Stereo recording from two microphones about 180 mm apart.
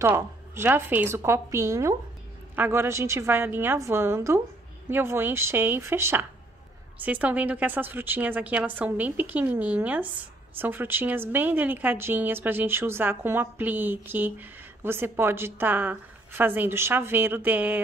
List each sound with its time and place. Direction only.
0.0 s speech: 15° right (ahead or behind)